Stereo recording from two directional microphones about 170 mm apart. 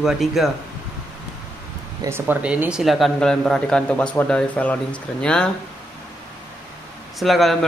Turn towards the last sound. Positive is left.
turn(degrees=0)  # may be behind; listen again after turning